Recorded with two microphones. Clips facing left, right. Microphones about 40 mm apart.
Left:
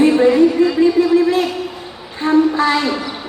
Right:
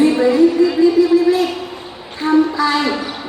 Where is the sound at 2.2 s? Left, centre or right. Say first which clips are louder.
Left 1 dB; left.